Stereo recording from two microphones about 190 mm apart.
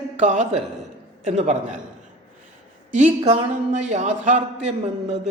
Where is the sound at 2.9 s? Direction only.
35° right (ahead or behind).